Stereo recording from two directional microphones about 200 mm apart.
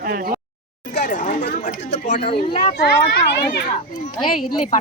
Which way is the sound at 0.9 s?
45° left (ahead or behind).